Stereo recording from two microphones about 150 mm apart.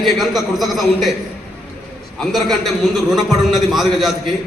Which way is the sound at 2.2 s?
Centre (ahead or behind).